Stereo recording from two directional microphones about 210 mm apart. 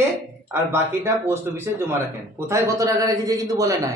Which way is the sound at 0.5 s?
10° right (ahead or behind).